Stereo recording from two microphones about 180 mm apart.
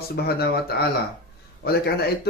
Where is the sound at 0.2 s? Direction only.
60° left (ahead or behind).